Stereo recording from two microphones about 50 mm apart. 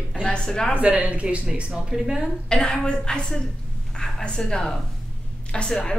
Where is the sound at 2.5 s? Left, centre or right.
Centre.